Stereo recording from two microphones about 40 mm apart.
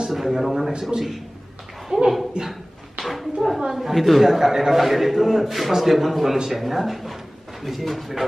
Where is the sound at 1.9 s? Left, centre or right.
Centre.